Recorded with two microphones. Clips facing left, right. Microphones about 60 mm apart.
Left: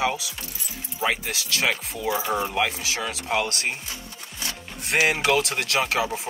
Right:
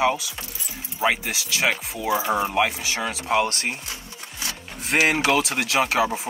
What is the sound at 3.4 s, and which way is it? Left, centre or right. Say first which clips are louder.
Speech: right 1 dB; centre.